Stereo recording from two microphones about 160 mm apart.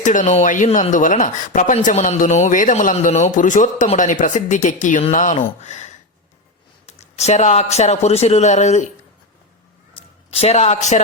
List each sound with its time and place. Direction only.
0.0 s speech: 50° left (ahead or behind)
10.0 s a sound: 35° left (ahead or behind)
10.3 s speech: 40° left (ahead or behind)